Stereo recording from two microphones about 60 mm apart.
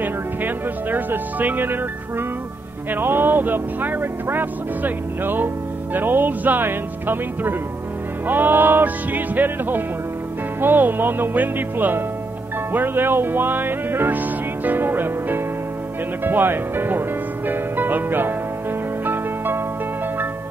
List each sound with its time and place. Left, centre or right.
0.0 s speech: right
2.9 s music: right
17.5 s speech: right
19.0 s zither: right